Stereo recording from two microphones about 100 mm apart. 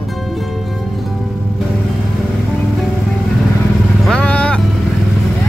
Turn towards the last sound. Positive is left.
turn(degrees=10)  # may be behind; listen again after turning